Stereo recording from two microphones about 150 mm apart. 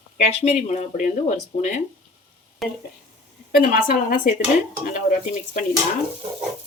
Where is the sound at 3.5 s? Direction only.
70° left (ahead or behind).